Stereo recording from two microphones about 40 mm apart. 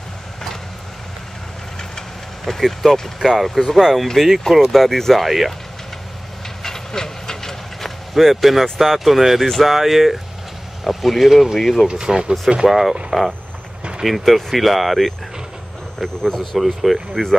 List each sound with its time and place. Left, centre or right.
1.8 s vehicle: centre
3.2 s speech: centre
6.6 s vehicle: centre
8.1 s speech: centre
11.9 s speech: right
12.6 s speech: centre
13.1 s speech: centre
16.0 s speech: centre
16.3 s speech: centre